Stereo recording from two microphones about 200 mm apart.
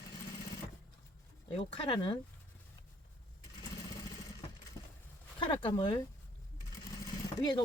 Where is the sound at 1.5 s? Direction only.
25° left (ahead or behind).